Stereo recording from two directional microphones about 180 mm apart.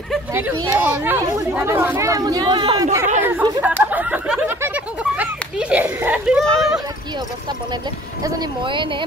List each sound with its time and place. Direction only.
0.3 s speech: 10° right (ahead or behind)
3.2 s chatter: 10° right (ahead or behind)
3.6 s a sound: 10° right (ahead or behind)
8.2 s speech: 20° right (ahead or behind)